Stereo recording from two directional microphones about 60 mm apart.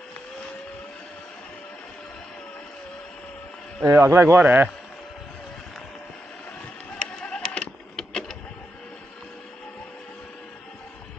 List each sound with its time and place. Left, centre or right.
3.8 s a man's voice: right
4.4 s speech: right
7.0 s music: centre
8.0 s vehicle: centre